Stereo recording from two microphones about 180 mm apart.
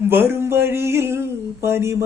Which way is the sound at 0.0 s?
10° right (ahead or behind).